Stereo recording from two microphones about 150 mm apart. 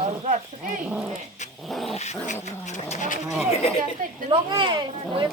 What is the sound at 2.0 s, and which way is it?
Dog, 50° left (ahead or behind).